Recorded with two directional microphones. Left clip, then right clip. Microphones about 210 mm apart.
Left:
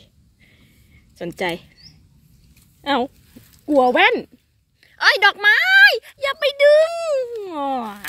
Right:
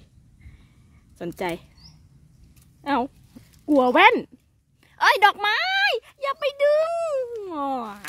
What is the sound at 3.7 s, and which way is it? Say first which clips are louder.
Speech: left 1 dB; 20° right (ahead or behind).